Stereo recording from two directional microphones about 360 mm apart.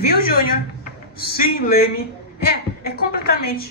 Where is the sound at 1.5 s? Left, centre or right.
Left.